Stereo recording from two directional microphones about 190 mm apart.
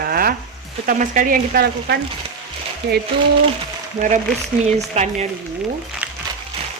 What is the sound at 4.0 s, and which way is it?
Speech, 40° right (ahead or behind).